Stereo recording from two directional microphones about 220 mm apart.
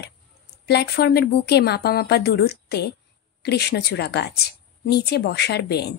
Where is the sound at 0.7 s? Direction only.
50° left (ahead or behind).